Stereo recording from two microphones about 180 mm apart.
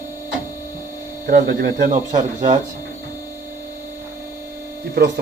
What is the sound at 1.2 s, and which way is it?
Speech, 55° right (ahead or behind).